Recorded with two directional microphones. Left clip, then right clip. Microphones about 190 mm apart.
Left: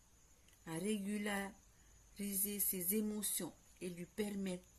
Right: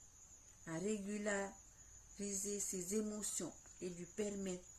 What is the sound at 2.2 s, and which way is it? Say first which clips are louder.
Speech: right 2 dB; 15° left (ahead or behind).